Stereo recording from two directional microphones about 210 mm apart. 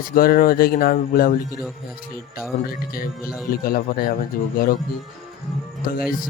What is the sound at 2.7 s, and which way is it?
Speech, 45° left (ahead or behind).